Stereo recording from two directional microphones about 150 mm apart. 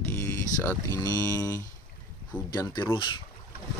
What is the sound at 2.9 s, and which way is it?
Speech, 35° left (ahead or behind).